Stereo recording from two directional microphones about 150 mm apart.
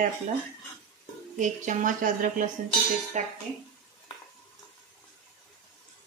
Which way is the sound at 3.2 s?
50° right (ahead or behind).